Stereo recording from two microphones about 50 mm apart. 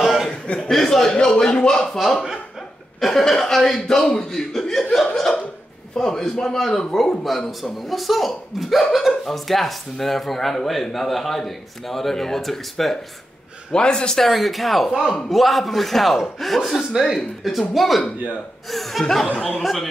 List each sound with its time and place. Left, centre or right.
0.0 s chuckle: centre
0.3 s chuckle: centre
1.2 s speech: centre
3.0 s speech: centre
13.7 s speech: centre
14.2 s speech: centre